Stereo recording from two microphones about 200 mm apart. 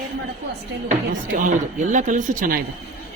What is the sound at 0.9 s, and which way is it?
A woman's voice, 40° right (ahead or behind).